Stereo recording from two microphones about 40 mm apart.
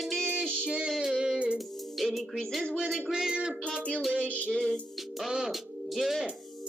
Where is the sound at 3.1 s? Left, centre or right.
Centre.